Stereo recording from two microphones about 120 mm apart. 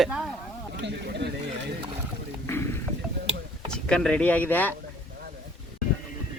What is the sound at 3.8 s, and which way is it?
Speech, 5° left (ahead or behind).